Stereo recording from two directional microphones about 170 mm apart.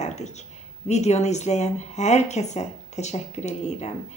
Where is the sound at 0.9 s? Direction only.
40° left (ahead or behind).